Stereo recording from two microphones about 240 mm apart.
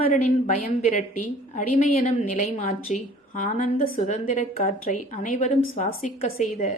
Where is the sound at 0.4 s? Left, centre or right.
Left.